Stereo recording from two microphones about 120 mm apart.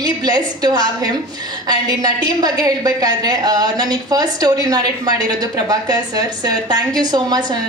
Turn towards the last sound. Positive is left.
turn(degrees=-35)  # may be behind; listen again after turning